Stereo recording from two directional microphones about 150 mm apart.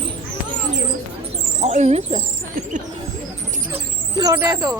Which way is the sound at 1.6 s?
50° right (ahead or behind).